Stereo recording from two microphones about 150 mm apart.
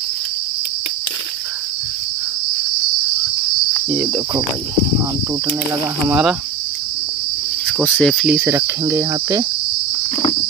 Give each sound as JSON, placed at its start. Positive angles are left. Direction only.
{"t": 3.9, "sound": "cricket", "side_deg": -20}
{"t": 6.0, "sound": "cricket", "side_deg": -10}
{"t": 7.8, "sound": "cricket", "side_deg": 5}
{"t": 8.3, "sound": "cricket", "side_deg": -15}